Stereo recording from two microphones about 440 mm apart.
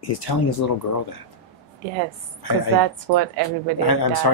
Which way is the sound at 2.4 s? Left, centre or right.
Left.